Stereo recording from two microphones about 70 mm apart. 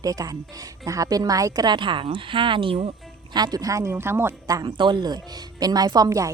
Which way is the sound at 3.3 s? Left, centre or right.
Right.